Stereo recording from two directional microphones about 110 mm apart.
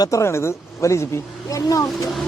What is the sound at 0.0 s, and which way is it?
Speech, 25° left (ahead or behind).